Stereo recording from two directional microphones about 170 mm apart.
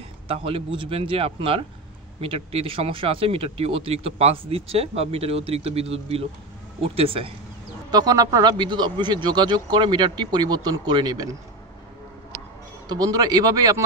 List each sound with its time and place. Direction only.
0.3 s speech: 35° right (ahead or behind)
7.9 s a man's voice: 20° right (ahead or behind)
12.8 s a man's voice: 20° right (ahead or behind)